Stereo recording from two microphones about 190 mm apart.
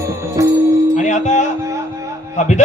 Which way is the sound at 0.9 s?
40° left (ahead or behind).